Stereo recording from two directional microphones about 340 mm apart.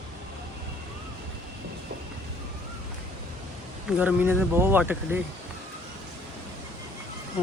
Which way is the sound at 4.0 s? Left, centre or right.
Centre.